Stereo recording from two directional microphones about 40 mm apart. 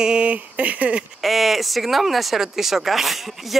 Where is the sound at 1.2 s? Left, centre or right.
Centre.